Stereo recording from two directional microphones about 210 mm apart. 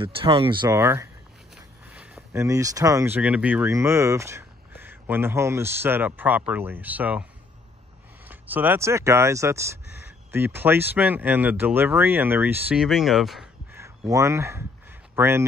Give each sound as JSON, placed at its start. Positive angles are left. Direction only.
{"t": 0.0, "sound": "speech", "side_deg": -25}
{"t": 0.7, "sound": "speech", "side_deg": -10}
{"t": 8.3, "sound": "speech", "side_deg": -10}
{"t": 13.7, "sound": "a sound", "side_deg": -15}